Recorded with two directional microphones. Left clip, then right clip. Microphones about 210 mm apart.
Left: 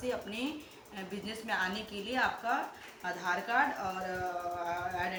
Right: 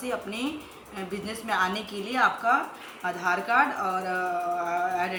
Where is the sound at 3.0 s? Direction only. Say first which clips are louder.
Right 7 dB; 5° left (ahead or behind).